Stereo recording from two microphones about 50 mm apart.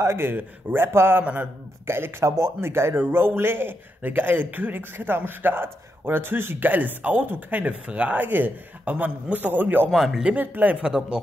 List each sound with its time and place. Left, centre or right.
0.0 s speech: right
0.3 s a man's voice: right
0.7 s a man's voice: right
1.2 s a man's voice: right
1.9 s speech: right
2.2 s speech: right
2.6 s a man's voice: right
7.6 s a man's voice: right
9.9 s speech: centre
10.3 s a man's voice: right
10.8 s speech: centre